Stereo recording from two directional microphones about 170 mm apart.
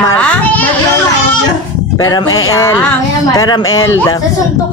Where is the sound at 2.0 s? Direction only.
25° left (ahead or behind).